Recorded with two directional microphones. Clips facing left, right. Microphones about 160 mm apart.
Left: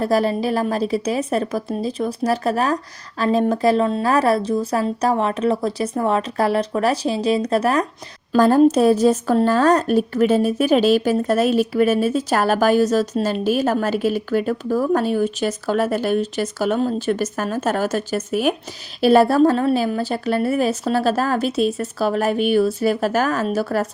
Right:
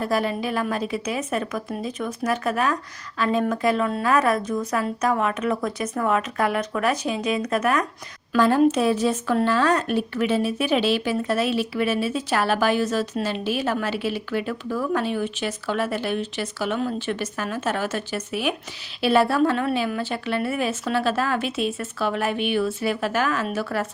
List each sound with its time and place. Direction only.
0.0 s speech: 35° left (ahead or behind)